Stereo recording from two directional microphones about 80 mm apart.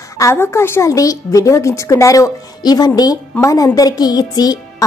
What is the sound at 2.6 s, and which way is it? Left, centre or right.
Speech, left.